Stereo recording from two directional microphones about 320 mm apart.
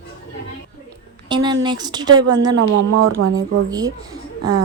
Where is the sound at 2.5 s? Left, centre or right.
Right.